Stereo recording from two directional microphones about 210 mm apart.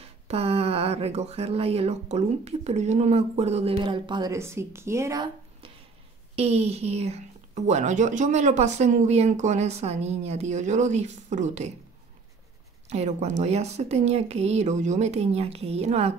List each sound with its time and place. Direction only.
0.0 s speech: 30° right (ahead or behind)
6.3 s speech: 30° right (ahead or behind)
12.8 s speech: 30° right (ahead or behind)